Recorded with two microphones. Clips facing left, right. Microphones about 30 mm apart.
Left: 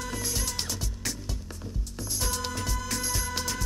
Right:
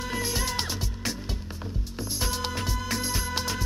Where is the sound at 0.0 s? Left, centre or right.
Right.